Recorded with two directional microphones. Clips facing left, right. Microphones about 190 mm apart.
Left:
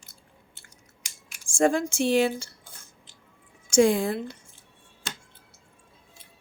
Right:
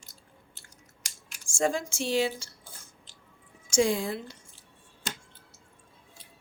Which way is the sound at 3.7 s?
55° left (ahead or behind).